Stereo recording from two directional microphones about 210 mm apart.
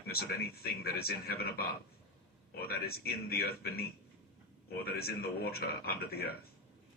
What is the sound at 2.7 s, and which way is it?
Speech, 45° left (ahead or behind).